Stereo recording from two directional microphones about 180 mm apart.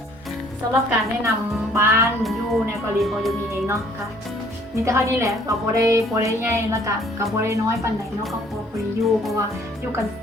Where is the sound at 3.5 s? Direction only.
15° right (ahead or behind).